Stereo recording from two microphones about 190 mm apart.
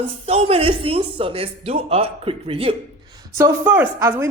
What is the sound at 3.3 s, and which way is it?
Speech, 15° right (ahead or behind).